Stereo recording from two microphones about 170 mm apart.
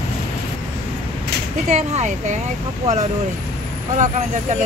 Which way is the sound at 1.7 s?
40° right (ahead or behind).